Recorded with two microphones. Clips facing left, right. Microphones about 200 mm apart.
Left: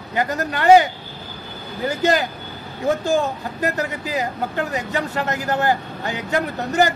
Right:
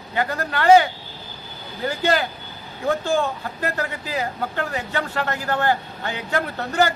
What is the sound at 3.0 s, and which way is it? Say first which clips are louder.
Speech: left 2 dB; 40° left (ahead or behind).